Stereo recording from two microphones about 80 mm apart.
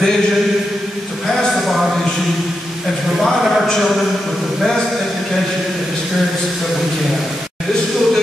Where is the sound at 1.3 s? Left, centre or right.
Centre.